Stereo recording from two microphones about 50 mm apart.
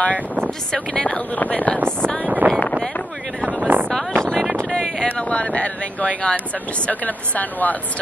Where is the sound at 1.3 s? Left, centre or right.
Left.